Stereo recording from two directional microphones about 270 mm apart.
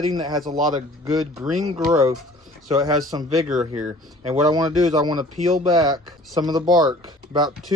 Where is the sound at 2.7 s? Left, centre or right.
Centre.